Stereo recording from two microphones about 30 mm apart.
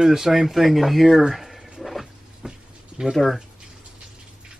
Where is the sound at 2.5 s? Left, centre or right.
Centre.